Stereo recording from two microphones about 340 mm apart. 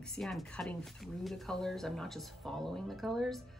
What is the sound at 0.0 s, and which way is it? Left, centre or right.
Speech, centre.